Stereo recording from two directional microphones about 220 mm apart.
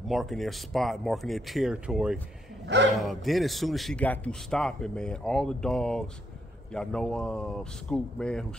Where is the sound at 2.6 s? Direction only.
50° right (ahead or behind).